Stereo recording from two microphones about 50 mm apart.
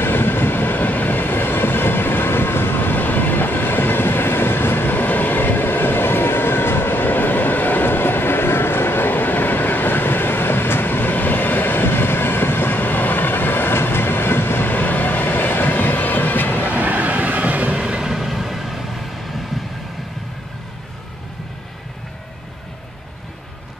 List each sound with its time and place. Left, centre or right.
0.0 s train: left
16.6 s vehicle: right
17.7 s vehicle: centre